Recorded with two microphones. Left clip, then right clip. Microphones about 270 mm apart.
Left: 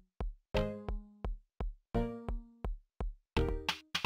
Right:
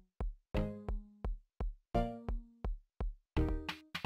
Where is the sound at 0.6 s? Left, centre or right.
Centre.